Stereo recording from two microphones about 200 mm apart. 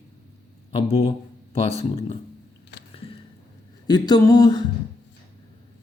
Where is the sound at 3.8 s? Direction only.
20° left (ahead or behind).